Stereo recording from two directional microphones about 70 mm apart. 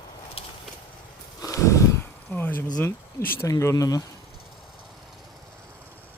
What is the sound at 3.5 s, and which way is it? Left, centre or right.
Speech, left.